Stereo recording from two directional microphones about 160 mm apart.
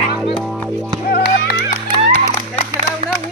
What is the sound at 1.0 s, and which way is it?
Music, 75° left (ahead or behind).